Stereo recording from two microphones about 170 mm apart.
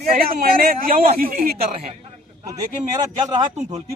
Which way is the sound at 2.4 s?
25° right (ahead or behind).